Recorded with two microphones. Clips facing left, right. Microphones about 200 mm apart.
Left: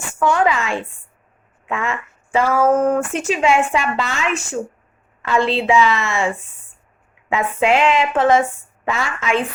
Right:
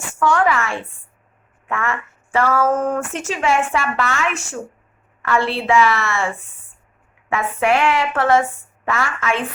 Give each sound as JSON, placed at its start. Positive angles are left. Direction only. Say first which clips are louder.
{"t": 0.2, "sound": "speech", "louder": "even", "side_deg": 15}
{"t": 7.3, "sound": "speech", "louder": "left 1 dB", "side_deg": 20}